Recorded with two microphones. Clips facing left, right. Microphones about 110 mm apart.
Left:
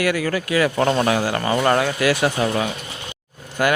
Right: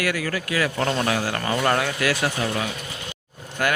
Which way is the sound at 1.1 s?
25° left (ahead or behind).